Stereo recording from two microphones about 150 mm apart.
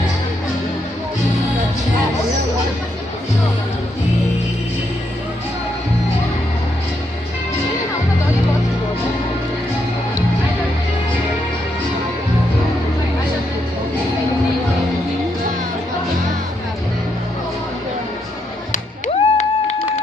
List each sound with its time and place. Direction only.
18.7 s music: 50° left (ahead or behind)